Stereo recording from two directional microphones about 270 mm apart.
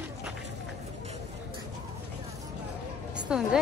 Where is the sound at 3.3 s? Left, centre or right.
Centre.